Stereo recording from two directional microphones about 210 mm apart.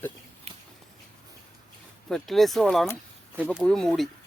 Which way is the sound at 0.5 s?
30° right (ahead or behind).